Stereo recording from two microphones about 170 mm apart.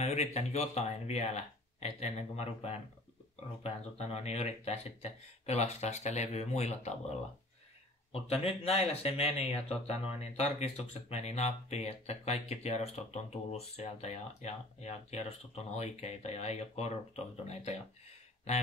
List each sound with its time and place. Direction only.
0.0 s speech: 40° left (ahead or behind)